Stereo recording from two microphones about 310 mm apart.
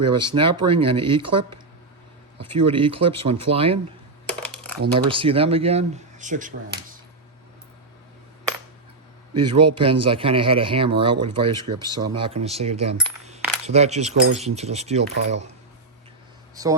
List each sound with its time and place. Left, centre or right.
0.0 s speech: centre
4.3 s coin: centre
4.9 s speech: centre
9.3 s speech: centre
16.6 s speech: centre